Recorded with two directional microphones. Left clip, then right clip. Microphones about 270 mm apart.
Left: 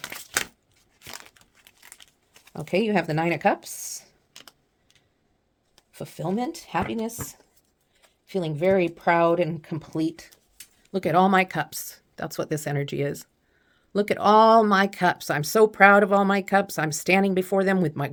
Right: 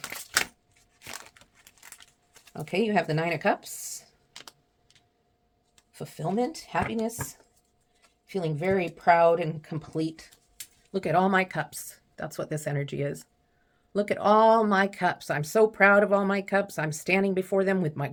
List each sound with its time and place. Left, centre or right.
0.0 s a sound: left
2.5 s speech: left
4.4 s typing: centre
5.9 s speech: left